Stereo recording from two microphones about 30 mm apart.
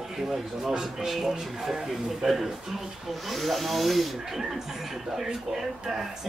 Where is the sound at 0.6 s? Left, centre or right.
Right.